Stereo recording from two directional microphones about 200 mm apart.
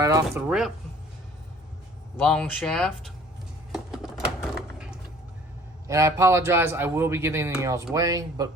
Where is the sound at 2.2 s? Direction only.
5° left (ahead or behind).